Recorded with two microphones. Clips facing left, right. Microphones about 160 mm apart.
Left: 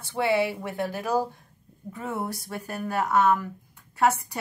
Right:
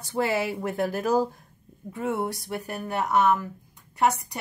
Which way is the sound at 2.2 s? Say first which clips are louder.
Right 3 dB; 25° right (ahead or behind).